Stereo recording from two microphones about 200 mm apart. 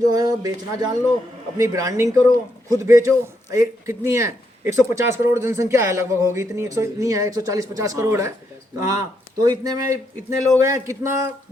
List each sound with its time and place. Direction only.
0.1 s a man's voice: 15° right (ahead or behind)